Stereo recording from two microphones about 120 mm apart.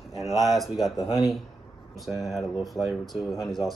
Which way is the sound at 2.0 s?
Centre (ahead or behind).